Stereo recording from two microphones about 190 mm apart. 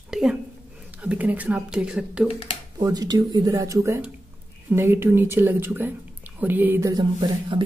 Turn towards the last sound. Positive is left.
turn(degrees=-20)  # may be behind; listen again after turning